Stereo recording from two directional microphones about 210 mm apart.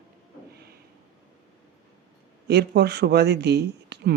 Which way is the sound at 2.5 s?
50° right (ahead or behind).